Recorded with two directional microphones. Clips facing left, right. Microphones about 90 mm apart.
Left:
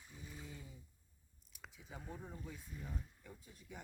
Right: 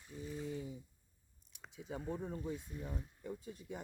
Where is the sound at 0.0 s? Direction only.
5° left (ahead or behind).